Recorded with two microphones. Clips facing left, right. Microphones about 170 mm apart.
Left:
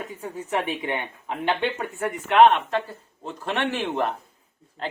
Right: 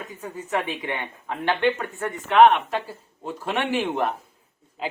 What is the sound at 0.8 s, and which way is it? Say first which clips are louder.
Speech: left 2 dB; 15° left (ahead or behind).